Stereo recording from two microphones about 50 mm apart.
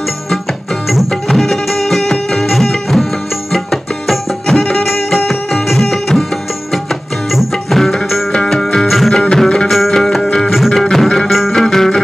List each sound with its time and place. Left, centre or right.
0.8 s music: centre
7.2 s music: centre
8.7 s music: centre
9.1 s music: centre
9.7 s music: centre
10.8 s music: centre
11.6 s music: centre